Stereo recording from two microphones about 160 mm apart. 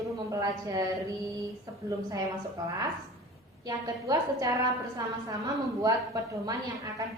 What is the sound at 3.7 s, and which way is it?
A woman's voice, 20° right (ahead or behind).